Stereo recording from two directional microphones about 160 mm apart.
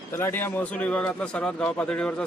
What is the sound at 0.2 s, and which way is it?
A man's voice, 15° left (ahead or behind).